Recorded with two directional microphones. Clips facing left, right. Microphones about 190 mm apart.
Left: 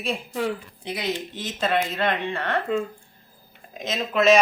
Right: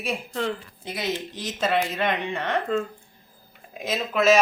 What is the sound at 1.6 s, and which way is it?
Speech, 10° right (ahead or behind).